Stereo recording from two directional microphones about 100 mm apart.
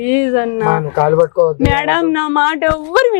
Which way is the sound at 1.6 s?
5° left (ahead or behind).